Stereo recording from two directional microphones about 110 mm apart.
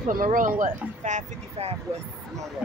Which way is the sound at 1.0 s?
80° right.